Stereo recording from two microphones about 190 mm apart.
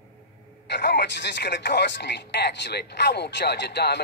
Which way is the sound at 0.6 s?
65° left (ahead or behind).